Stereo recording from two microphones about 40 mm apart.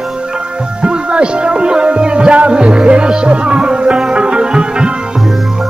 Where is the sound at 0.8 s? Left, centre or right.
Right.